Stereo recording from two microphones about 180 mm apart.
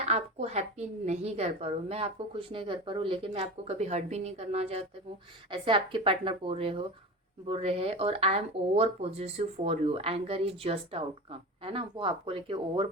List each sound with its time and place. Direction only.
0.0 s a woman's voice: 40° right (ahead or behind)